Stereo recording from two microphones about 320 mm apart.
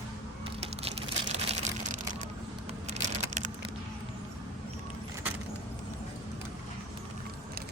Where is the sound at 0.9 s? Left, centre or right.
Centre.